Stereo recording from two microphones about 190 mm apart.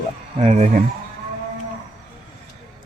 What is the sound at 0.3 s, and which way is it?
Speech, 35° right (ahead or behind).